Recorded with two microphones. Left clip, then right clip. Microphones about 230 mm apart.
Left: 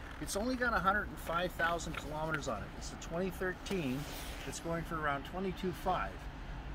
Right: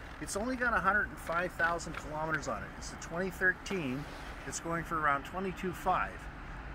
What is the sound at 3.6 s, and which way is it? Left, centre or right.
Speech, left.